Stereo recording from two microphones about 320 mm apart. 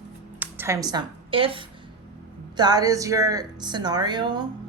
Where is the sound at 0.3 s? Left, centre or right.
Centre.